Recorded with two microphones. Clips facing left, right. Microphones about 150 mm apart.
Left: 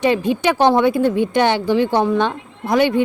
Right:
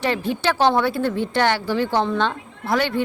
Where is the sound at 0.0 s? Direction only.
15° left (ahead or behind).